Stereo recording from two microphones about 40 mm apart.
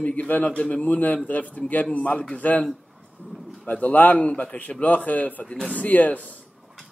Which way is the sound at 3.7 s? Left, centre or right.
Left.